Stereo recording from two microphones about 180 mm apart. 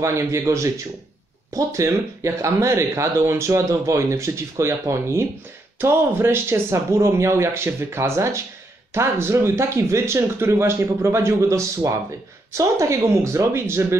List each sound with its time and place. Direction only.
0.0 s speech: 15° right (ahead or behind)